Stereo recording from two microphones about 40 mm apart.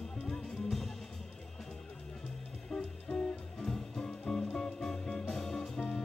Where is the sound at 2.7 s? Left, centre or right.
Left.